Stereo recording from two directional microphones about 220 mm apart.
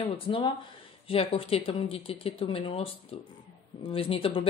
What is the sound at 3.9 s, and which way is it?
Speech, 25° left (ahead or behind).